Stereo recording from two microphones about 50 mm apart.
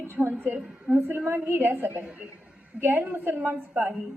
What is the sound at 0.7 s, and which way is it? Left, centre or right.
Speech, centre.